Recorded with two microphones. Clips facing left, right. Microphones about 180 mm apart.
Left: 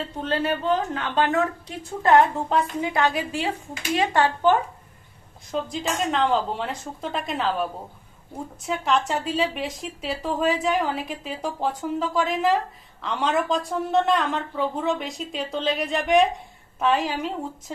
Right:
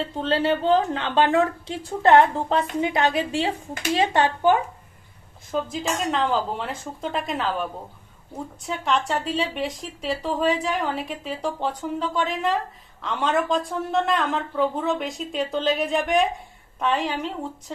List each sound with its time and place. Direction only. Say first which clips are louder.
0.2 s a woman's voice: right 3 dB; 30° right (ahead or behind)
5.5 s speech: right 1 dB; centre (ahead or behind)